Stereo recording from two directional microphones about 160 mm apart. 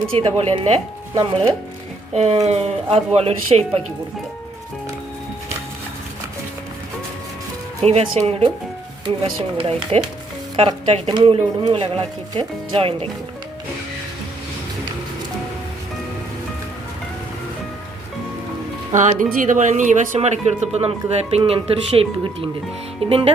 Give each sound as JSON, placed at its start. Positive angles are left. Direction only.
{"t": 0.1, "sound": "speech", "side_deg": -35}
{"t": 2.1, "sound": "speech", "side_deg": -45}
{"t": 7.8, "sound": "speech", "side_deg": -40}
{"t": 18.9, "sound": "speech", "side_deg": -55}